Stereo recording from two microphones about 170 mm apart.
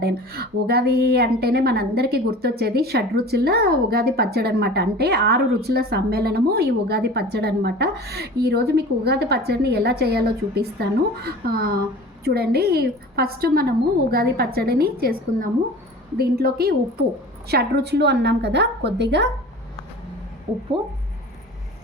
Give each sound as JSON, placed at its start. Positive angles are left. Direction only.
{"t": 0.0, "sound": "a woman's voice", "side_deg": -65}